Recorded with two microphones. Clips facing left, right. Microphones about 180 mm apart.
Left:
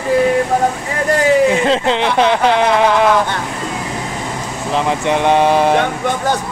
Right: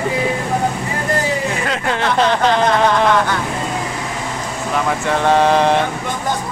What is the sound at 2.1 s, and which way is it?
Speech, 10° left (ahead or behind).